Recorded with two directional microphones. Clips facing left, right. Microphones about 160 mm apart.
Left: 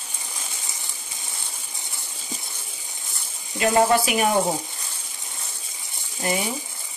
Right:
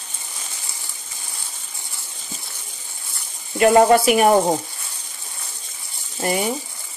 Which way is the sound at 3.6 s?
55° right (ahead or behind).